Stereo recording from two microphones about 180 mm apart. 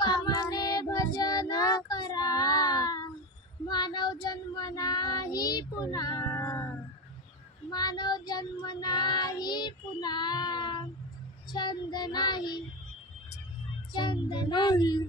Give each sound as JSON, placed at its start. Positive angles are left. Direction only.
{"t": 0.0, "sound": "child singing", "side_deg": 25}
{"t": 7.7, "sound": "child singing", "side_deg": 20}
{"t": 13.9, "sound": "child singing", "side_deg": 25}